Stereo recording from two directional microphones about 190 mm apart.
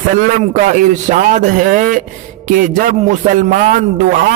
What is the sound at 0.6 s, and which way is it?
Speech, 40° right (ahead or behind).